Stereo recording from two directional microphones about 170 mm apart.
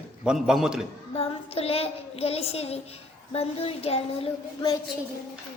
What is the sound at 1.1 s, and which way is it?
Speech, 35° left (ahead or behind).